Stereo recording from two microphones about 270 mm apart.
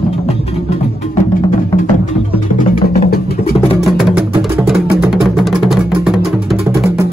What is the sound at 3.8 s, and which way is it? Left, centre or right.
Music, centre.